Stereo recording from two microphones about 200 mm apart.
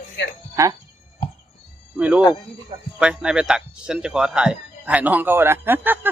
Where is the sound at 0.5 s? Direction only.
15° right (ahead or behind).